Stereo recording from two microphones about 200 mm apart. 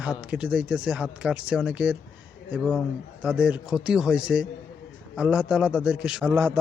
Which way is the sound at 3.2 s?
5° right (ahead or behind).